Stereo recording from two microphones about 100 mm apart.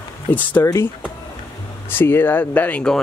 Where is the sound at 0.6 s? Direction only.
30° left (ahead or behind).